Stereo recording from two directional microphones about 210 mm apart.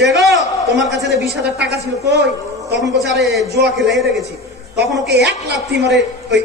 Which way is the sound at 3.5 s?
50° right (ahead or behind).